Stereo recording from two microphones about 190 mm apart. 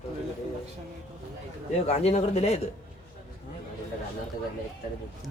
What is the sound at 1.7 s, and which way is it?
Speech, 35° left (ahead or behind).